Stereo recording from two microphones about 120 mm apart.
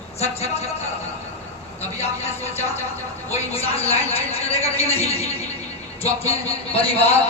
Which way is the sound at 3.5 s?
55° left (ahead or behind).